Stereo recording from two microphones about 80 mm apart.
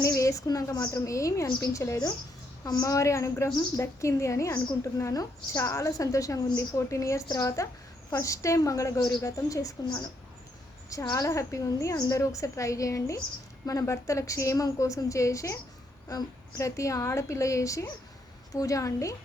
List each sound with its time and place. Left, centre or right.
0.0 s a woman's voice: left
1.0 s a woman's voice: left
2.6 s a woman's voice: left
7.3 s a woman's voice: left